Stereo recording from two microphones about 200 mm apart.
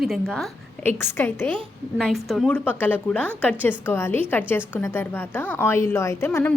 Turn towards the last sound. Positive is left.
turn(degrees=10)  # may be behind; listen again after turning